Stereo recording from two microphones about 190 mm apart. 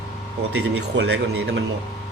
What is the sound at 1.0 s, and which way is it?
Speech, 65° right (ahead or behind).